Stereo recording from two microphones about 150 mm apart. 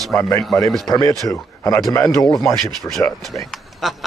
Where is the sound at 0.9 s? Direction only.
25° left (ahead or behind).